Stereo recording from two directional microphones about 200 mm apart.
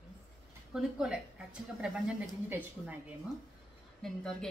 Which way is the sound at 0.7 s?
5° right (ahead or behind).